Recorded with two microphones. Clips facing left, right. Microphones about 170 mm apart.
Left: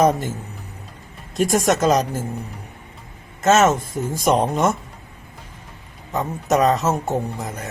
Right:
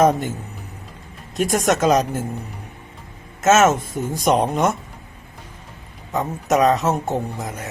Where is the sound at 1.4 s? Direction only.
Centre (ahead or behind).